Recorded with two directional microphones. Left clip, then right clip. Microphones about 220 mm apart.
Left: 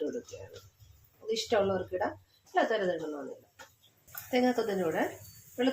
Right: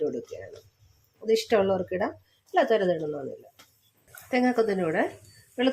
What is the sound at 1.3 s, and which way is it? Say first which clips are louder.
Speech: right 6 dB; 50° right (ahead or behind).